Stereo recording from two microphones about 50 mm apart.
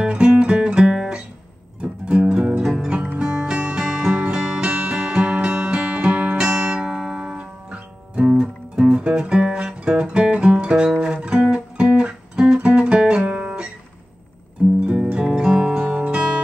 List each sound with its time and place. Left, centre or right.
0.0 s music: right
12.6 s guitar: centre
14.9 s music: right
15.1 s music: centre